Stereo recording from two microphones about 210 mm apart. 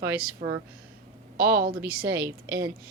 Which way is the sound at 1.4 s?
45° right (ahead or behind).